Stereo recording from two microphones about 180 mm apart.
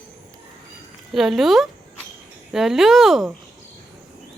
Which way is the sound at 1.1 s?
Centre (ahead or behind).